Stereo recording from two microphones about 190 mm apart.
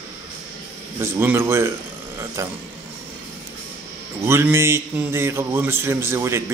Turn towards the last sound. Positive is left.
turn(degrees=-15)  # may be behind; listen again after turning